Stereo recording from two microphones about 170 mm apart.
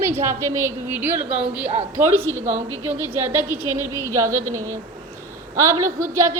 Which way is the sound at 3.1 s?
15° right (ahead or behind).